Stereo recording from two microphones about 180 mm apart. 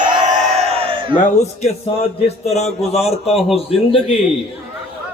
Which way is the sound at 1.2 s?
40° left (ahead or behind).